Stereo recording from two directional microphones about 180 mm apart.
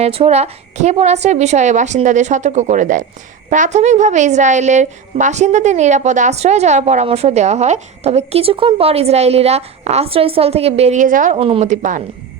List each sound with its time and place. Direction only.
0.0 s a woman's voice: 35° right (ahead or behind)
11.3 s a woman's voice: 30° right (ahead or behind)